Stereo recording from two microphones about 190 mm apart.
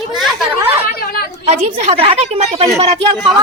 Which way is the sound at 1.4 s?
30° right (ahead or behind).